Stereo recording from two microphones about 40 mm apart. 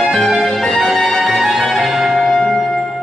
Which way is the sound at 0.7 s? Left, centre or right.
Centre.